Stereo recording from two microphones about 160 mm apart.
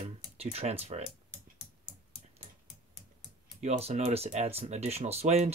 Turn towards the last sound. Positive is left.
turn(degrees=-45)  # may be behind; listen again after turning